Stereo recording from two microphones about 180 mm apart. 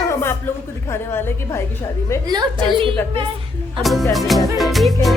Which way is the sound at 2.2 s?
25° right (ahead or behind).